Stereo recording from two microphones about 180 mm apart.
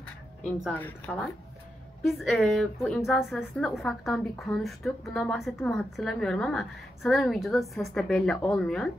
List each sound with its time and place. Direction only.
0.7 s a woman's voice: 10° left (ahead or behind)